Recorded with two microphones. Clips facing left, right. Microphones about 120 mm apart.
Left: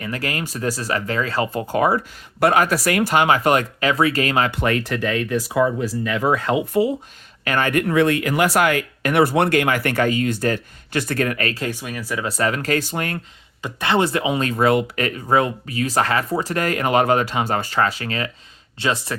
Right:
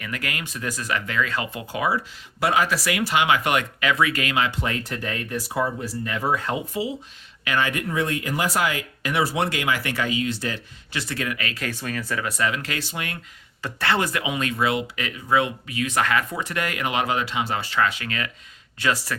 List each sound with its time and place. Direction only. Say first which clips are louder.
0.0 s speech: left 5 dB; 35° left (ahead or behind)
4.5 s speech: left 7 dB; 65° left (ahead or behind); by 6.6 s 90° left
7.4 s speech: left 5 dB; 50° left (ahead or behind)
11.7 s speech: left 1 dB; 10° left (ahead or behind)
12.2 s speech: left 6 dB; 40° left (ahead or behind)
13.6 s speech: left 4 dB; 15° left (ahead or behind)